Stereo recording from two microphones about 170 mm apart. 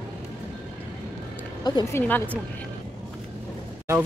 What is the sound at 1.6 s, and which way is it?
Speech, 20° left (ahead or behind).